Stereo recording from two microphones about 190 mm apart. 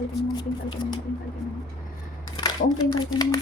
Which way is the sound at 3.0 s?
20° left (ahead or behind).